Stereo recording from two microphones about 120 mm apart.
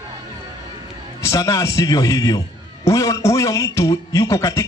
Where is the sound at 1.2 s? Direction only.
25° left (ahead or behind).